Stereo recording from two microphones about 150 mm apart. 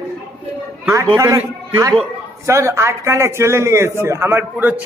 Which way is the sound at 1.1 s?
20° right (ahead or behind).